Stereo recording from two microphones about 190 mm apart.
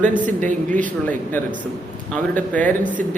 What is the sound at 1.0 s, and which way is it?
A man's voice, 10° left (ahead or behind).